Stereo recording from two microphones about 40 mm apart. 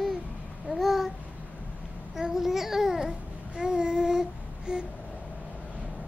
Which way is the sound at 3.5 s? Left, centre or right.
Right.